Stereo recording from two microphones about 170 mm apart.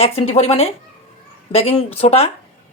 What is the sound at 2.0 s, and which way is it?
Speech, 35° left (ahead or behind).